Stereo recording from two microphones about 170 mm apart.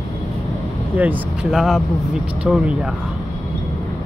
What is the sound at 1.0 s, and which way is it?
Speech, 5° right (ahead or behind).